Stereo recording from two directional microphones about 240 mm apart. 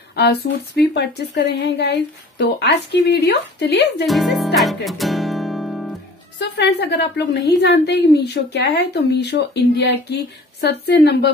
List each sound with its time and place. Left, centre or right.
0.1 s a woman's voice: left
4.0 s speech: centre
4.6 s music: centre
6.4 s a woman's voice: left